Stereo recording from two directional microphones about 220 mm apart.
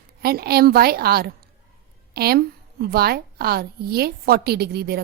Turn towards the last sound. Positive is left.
turn(degrees=-45)  # may be behind; listen again after turning